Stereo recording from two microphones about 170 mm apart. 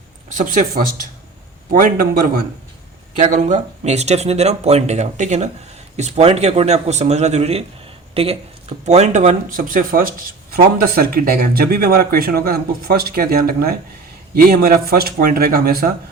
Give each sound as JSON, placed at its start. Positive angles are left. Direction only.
{"t": 0.3, "sound": "speech", "side_deg": -50}
{"t": 3.2, "sound": "speech", "side_deg": -45}